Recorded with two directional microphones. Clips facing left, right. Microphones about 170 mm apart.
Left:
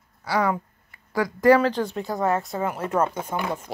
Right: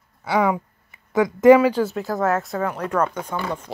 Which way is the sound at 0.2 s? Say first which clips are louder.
Right 3 dB; 20° right (ahead or behind).